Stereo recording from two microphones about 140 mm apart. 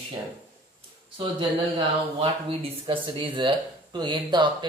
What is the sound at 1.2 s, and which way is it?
Speech, 35° right (ahead or behind).